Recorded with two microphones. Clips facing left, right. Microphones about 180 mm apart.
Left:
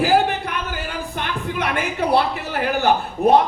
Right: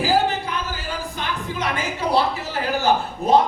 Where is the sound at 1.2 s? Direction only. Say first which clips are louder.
Left 3 dB; 60° left (ahead or behind).